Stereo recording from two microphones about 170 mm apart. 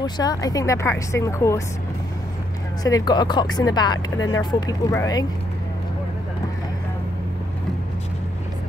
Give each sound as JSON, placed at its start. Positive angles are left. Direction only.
{"t": 0.0, "sound": "speech", "side_deg": 25}
{"t": 2.8, "sound": "speech", "side_deg": 25}